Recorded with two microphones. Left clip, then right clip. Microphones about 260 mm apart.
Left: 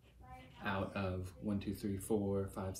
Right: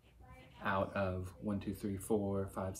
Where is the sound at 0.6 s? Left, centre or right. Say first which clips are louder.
Right 4 dB; centre.